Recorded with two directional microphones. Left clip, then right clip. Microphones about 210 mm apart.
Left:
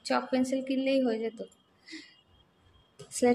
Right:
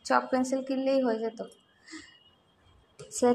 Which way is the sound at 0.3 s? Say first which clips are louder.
Right 1 dB; 25° left (ahead or behind).